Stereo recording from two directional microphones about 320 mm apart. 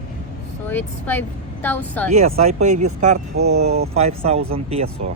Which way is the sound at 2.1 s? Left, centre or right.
Centre.